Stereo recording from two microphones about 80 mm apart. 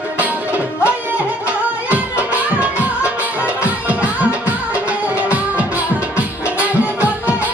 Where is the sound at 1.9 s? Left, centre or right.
Centre.